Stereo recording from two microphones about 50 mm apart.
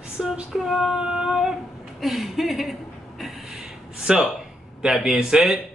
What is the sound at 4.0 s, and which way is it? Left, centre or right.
A man's voice, centre.